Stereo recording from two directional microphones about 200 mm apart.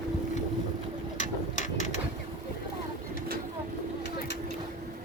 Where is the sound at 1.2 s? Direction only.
40° left (ahead or behind).